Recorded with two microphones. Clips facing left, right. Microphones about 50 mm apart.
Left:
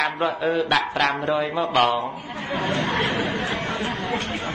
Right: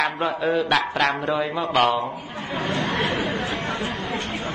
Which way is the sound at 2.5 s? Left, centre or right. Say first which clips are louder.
Left 1 dB; left.